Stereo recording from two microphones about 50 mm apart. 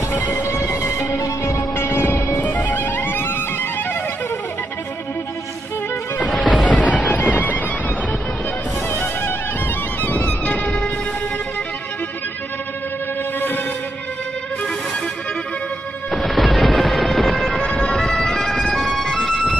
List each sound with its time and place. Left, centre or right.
0.2 s music: left
0.7 s music: left
2.3 s music: left
6.2 s music: centre
6.8 s music: left
7.2 s music: left
8.9 s music: left
10.0 s music: left
16.1 s music: centre